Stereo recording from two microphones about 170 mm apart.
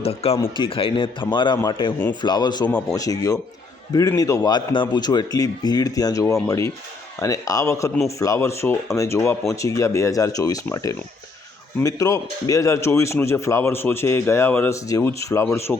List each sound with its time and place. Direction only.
0.0 s a man's voice: 35° left (ahead or behind); by 15.8 s 15° left (ahead or behind)